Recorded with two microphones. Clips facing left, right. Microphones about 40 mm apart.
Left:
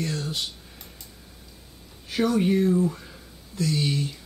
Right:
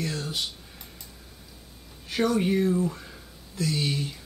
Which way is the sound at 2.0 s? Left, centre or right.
Centre.